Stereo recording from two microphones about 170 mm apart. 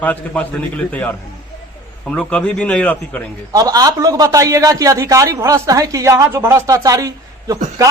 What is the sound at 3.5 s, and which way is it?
A man's voice, 20° right (ahead or behind).